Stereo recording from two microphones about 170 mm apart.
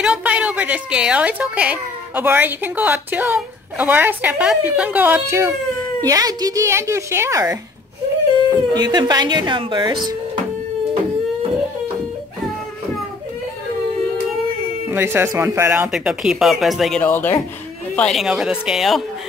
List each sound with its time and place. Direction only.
0.0 s a woman's voice: 5° right (ahead or behind)
8.7 s speech: 25° right (ahead or behind)
14.9 s a woman's voice: 15° right (ahead or behind)
15.9 s speech: 5° right (ahead or behind)
17.0 s speech: 10° left (ahead or behind)